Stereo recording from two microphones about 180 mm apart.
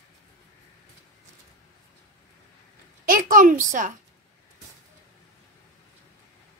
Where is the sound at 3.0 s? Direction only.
50° right (ahead or behind).